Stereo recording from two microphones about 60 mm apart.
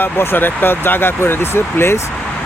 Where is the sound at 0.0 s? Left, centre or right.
Left.